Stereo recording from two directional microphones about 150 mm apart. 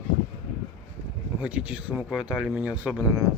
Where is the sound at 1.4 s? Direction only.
10° right (ahead or behind).